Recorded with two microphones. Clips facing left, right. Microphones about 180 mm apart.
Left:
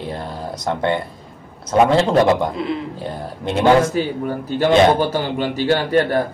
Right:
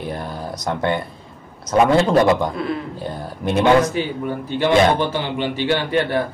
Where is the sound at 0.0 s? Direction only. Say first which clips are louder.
Even; 25° left (ahead or behind).